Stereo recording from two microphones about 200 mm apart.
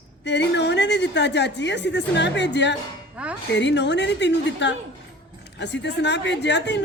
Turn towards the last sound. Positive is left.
turn(degrees=60)  # may be behind; listen again after turning